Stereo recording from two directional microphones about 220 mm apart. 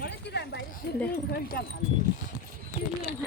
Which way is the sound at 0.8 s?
45° left (ahead or behind).